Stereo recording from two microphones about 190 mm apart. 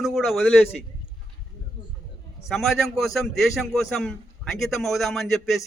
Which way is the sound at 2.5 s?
Centre (ahead or behind).